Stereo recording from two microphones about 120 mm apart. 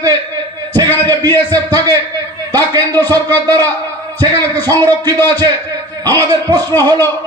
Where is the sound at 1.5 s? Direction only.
30° right (ahead or behind).